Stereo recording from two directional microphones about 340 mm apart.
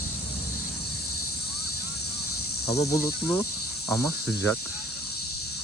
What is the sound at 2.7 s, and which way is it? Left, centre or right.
Cricket, centre.